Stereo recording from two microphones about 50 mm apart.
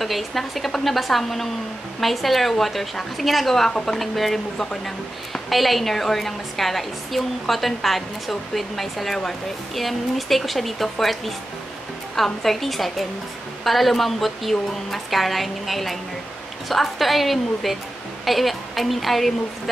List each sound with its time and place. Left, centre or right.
0.0 s a woman's voice: centre
12.4 s a woman's voice: centre